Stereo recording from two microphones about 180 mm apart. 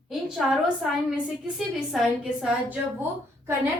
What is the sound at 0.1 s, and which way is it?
A woman's voice, centre (ahead or behind).